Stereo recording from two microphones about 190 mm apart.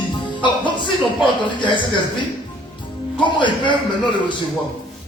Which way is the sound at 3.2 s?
25° left (ahead or behind).